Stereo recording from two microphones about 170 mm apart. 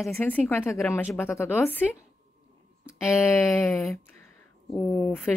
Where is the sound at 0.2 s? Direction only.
10° left (ahead or behind).